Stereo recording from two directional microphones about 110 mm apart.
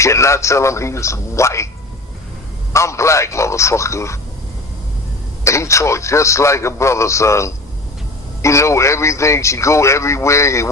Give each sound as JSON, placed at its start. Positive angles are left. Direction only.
{"t": 0.0, "sound": "a man's voice", "side_deg": 25}
{"t": 2.7, "sound": "a man's voice", "side_deg": 25}
{"t": 5.5, "sound": "a man's voice", "side_deg": 25}